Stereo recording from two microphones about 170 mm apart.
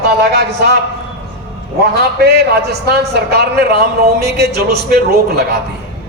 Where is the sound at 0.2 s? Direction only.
75° right (ahead or behind).